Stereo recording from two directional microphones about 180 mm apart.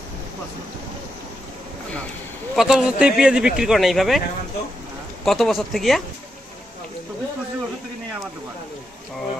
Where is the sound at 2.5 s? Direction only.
5° right (ahead or behind).